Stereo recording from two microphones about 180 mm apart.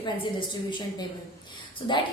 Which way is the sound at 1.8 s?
30° left (ahead or behind).